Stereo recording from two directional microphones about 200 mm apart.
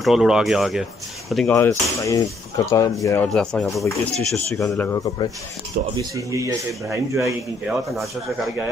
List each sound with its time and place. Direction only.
0.0 s speech: centre (ahead or behind)
1.5 s speech: 15° left (ahead or behind)
3.3 s speech: 5° left (ahead or behind)
5.7 s speech: 45° right (ahead or behind)
6.1 s speech: 15° right (ahead or behind)